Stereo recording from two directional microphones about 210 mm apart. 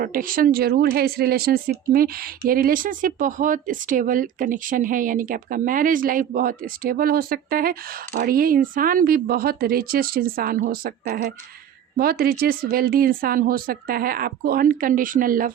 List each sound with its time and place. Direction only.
0.0 s speech: 40° right (ahead or behind)